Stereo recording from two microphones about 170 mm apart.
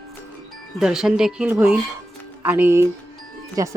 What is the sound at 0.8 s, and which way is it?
Speech, 5° right (ahead or behind).